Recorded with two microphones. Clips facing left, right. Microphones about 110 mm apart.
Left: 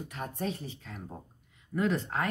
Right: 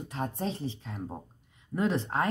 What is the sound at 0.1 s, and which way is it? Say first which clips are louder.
Speech: right 3 dB; 30° right (ahead or behind).